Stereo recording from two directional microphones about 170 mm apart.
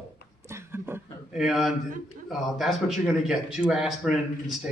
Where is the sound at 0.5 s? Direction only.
15° right (ahead or behind).